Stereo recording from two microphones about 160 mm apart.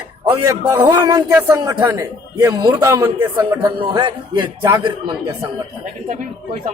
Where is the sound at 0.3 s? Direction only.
25° right (ahead or behind).